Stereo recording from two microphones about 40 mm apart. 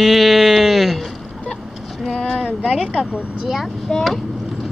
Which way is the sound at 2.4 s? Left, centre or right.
Right.